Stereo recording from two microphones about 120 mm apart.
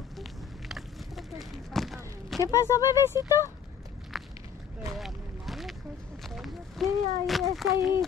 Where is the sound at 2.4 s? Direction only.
25° left (ahead or behind).